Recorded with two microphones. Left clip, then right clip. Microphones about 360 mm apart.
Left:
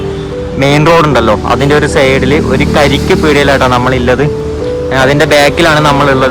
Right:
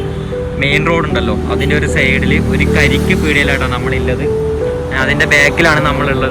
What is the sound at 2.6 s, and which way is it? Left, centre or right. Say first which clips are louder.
Speech: left 4 dB; centre.